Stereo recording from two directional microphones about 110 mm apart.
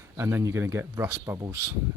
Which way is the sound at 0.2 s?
25° right (ahead or behind).